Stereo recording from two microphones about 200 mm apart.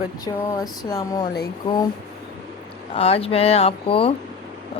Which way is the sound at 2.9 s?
30° left (ahead or behind).